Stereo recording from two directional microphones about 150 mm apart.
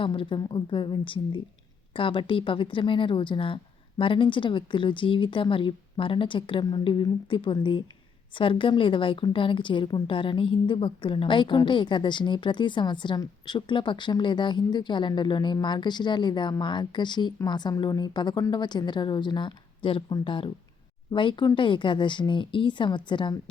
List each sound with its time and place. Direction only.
0.0 s a woman's voice: 35° left (ahead or behind)